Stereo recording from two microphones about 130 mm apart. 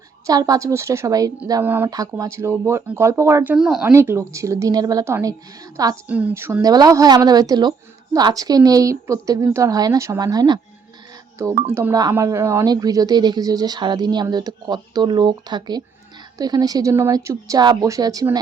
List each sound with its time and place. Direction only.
0.3 s a woman's voice: 30° right (ahead or behind)
1.6 s speech: 15° right (ahead or behind)
1.9 s a woman's voice: 25° right (ahead or behind)
3.5 s speech: 5° right (ahead or behind)
3.9 s a woman's voice: 20° right (ahead or behind)
6.1 s a woman's voice: 10° right (ahead or behind); by 10.6 s 30° right (ahead or behind)
11.7 s a woman's voice: 20° right (ahead or behind)